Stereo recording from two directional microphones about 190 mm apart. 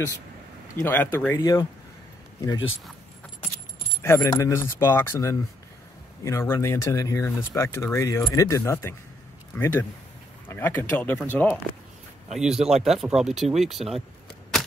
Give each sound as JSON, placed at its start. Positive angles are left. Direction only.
{"t": 0.7, "sound": "speech", "side_deg": 10}
{"t": 4.0, "sound": "speech", "side_deg": 15}
{"t": 12.3, "sound": "speech", "side_deg": -5}